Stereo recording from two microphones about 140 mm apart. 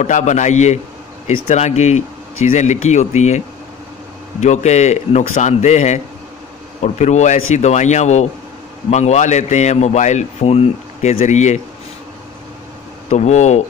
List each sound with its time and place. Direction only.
0.0 s a man's voice: 60° left (ahead or behind)
13.1 s a man's voice: 55° left (ahead or behind)